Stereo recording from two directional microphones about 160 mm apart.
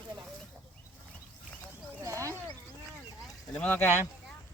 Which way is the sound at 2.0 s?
20° right (ahead or behind).